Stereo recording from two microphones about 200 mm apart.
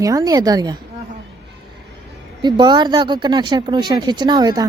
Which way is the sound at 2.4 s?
20° right (ahead or behind).